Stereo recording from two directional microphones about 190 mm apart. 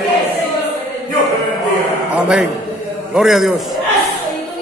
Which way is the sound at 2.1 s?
5° right (ahead or behind).